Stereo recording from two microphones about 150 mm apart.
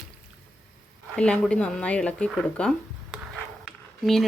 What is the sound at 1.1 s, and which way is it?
A woman's voice, 5° left (ahead or behind).